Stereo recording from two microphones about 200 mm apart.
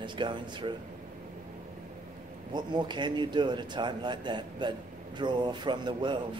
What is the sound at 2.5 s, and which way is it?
A man's voice, 20° right (ahead or behind).